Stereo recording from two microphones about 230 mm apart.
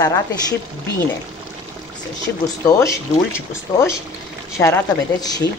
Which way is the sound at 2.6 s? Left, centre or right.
Centre.